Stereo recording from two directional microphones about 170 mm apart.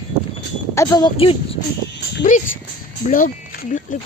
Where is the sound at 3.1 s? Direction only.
55° left (ahead or behind).